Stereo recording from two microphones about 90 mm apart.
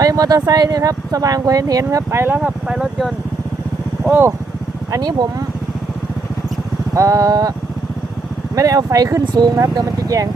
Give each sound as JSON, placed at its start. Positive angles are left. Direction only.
{"t": 0.0, "sound": "speech", "side_deg": -45}
{"t": 2.4, "sound": "speech", "side_deg": -5}
{"t": 4.1, "sound": "speech", "side_deg": -25}
{"t": 4.9, "sound": "speech", "side_deg": -45}
{"t": 6.9, "sound": "speech", "side_deg": -40}
{"t": 8.5, "sound": "speech", "side_deg": -40}